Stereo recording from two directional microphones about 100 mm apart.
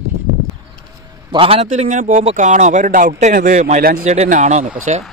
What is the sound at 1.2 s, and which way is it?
A man's voice, 65° right (ahead or behind).